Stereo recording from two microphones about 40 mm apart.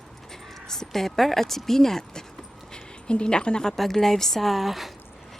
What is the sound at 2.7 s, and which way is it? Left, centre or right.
Speech, left.